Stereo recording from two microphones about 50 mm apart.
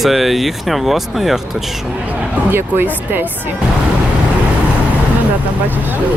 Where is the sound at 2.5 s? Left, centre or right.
Right.